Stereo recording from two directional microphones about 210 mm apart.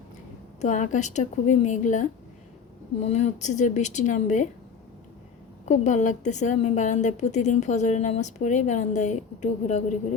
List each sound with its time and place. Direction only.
0.6 s a woman's voice: 35° left (ahead or behind)
5.6 s a woman's voice: 35° left (ahead or behind)